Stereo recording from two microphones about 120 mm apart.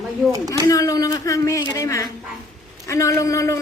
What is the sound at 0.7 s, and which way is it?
Speech, 30° left (ahead or behind).